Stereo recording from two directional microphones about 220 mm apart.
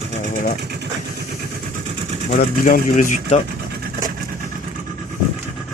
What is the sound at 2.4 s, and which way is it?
Speech, 35° left (ahead or behind).